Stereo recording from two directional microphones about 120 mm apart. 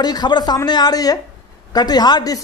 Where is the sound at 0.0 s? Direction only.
35° left (ahead or behind).